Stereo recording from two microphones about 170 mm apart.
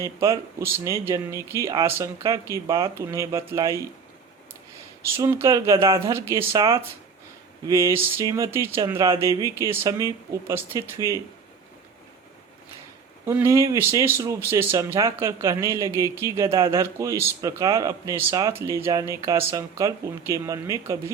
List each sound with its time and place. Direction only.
0.0 s speech: 15° right (ahead or behind)
5.1 s speech: 15° right (ahead or behind)
7.7 s speech: 20° right (ahead or behind)
13.2 s speech: 15° right (ahead or behind)